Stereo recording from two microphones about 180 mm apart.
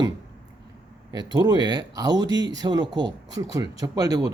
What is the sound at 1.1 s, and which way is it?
Speech, 20° right (ahead or behind).